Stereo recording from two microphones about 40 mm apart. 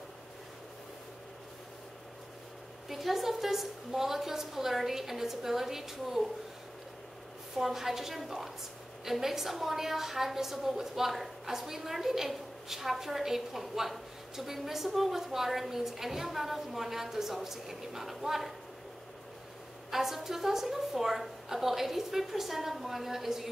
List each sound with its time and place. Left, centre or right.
2.9 s a woman's voice: centre
7.5 s a woman's voice: centre
19.9 s a woman's voice: centre